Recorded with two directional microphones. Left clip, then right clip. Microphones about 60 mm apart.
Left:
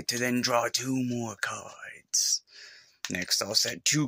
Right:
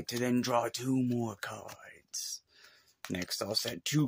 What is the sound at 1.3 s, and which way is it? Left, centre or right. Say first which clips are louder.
Speech: left 8 dB; right.